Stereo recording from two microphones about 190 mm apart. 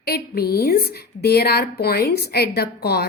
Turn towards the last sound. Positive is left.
turn(degrees=55)  # may be behind; listen again after turning